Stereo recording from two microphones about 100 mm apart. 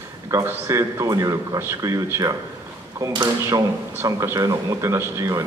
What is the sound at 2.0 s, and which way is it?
Speech, 25° right (ahead or behind).